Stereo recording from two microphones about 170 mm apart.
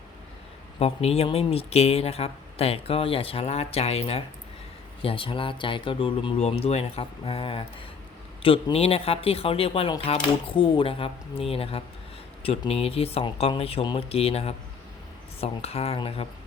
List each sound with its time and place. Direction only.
0.8 s speech: 35° left (ahead or behind)